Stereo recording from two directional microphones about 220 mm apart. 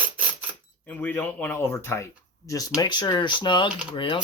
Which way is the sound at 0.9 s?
10° left (ahead or behind).